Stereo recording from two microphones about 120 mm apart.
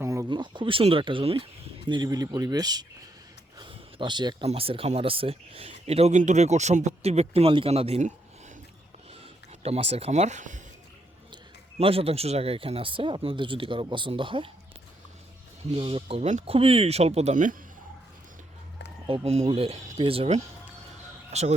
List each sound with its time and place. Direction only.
0.0 s a sound: 25° right (ahead or behind)
0.3 s speech: 40° right (ahead or behind)
1.9 s speech: 35° right (ahead or behind)
3.6 s a sound: 45° right (ahead or behind)
4.4 s speech: 50° right (ahead or behind)
9.6 s speech: 60° right (ahead or behind); by 10.6 s 90° right
11.8 s speech: 50° right (ahead or behind)
15.7 s speech: 50° right (ahead or behind); by 17.5 s 75° right (ahead or behind)
19.0 s speech: 50° right (ahead or behind)
21.3 s speech: 65° right (ahead or behind)